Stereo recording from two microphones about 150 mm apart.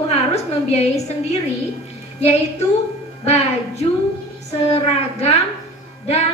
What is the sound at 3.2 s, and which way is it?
A woman's voice, 45° left (ahead or behind).